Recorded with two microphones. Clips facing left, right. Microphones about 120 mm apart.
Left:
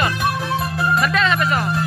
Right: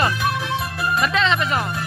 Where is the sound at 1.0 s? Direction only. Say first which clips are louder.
Left 1 dB; 20° right (ahead or behind).